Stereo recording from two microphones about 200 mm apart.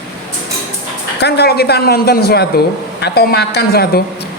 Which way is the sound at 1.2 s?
55° left (ahead or behind).